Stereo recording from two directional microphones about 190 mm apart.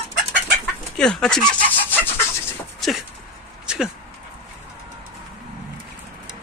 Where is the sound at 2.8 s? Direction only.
Centre (ahead or behind).